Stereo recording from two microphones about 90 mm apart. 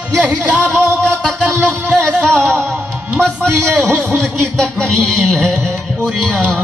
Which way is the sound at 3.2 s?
10° left (ahead or behind).